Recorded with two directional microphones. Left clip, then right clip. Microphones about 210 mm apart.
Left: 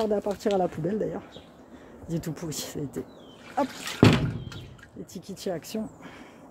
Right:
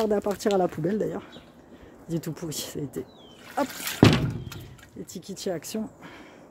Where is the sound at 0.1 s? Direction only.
25° right (ahead or behind).